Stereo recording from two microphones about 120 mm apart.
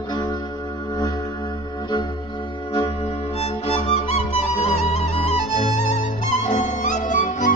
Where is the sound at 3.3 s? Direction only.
55° left (ahead or behind).